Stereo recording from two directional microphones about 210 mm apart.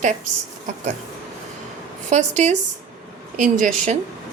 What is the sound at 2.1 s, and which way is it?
A woman's voice, 35° right (ahead or behind).